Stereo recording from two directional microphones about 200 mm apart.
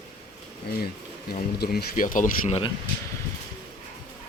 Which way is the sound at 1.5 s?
50° left (ahead or behind).